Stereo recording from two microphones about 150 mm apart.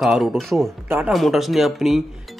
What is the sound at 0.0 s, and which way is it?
Speech, centre (ahead or behind).